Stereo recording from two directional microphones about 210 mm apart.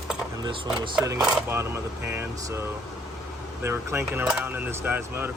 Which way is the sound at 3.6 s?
10° right (ahead or behind).